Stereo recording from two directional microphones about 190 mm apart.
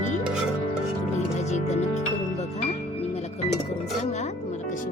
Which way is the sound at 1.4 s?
40° left (ahead or behind).